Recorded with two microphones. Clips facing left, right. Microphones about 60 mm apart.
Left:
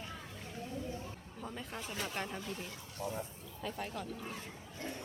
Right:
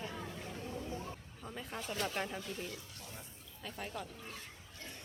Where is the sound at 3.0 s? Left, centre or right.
Left.